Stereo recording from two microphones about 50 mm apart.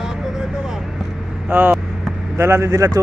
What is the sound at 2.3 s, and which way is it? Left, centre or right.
Speech, right.